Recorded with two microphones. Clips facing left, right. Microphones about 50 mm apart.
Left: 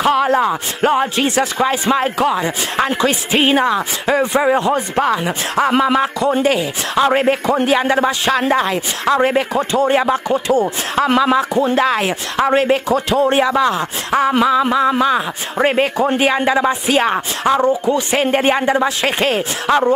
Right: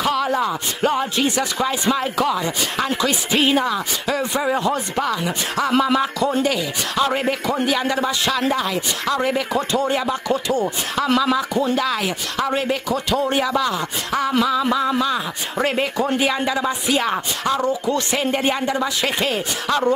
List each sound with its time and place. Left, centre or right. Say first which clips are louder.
0.0 s speech: left 6 dB; left
6.4 s speech: left 5 dB; left
10.3 s speech: left 4 dB; centre
11.1 s speech: left 4 dB; left
16.2 s speech: left 6 dB; left
18.1 s speech: left 8 dB; left
19.7 s speech: left 6 dB; left